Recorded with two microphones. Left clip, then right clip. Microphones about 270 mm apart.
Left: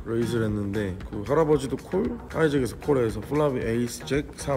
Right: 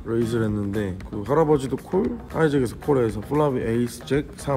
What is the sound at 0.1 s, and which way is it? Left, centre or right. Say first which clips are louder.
Speech: right 3 dB; centre.